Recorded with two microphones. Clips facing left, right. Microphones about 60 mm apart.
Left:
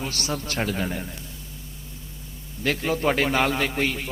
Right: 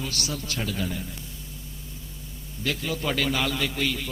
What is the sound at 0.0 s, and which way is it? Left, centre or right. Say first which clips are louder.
A man's voice: left 3 dB; left.